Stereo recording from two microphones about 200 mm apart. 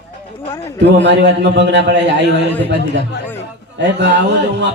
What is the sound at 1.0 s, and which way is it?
A man's voice, 60° right (ahead or behind).